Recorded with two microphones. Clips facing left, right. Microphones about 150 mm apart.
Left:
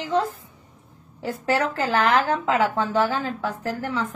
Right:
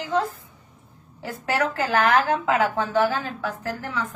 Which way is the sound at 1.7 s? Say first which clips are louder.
Right 3 dB; 30° left (ahead or behind).